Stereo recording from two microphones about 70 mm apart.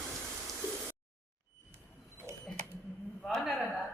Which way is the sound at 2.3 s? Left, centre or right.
Right.